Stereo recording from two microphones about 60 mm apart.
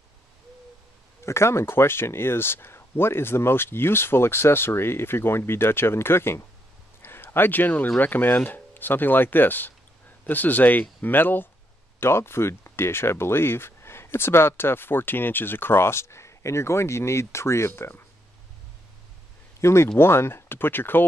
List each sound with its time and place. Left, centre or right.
1.2 s speech: left
7.0 s a sound: left
8.0 s speech: left
12.0 s speech: left
19.6 s speech: left